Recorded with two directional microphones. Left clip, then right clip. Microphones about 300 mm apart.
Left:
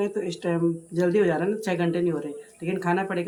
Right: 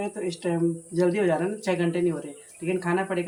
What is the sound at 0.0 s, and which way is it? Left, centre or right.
Speech, centre.